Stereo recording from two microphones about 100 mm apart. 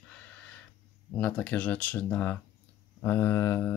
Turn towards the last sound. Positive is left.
turn(degrees=25)  # may be behind; listen again after turning